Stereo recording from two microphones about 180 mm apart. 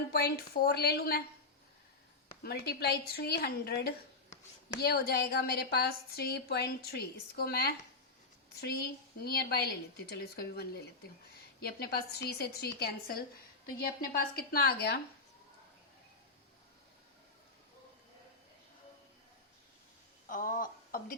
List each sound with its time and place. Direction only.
0.1 s a woman's voice: 60° left (ahead or behind)
2.4 s a woman's voice: 65° left (ahead or behind)
20.2 s a woman's voice: 50° left (ahead or behind)